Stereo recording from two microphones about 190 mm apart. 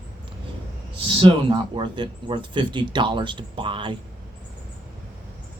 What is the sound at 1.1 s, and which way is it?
Speech, 25° right (ahead or behind).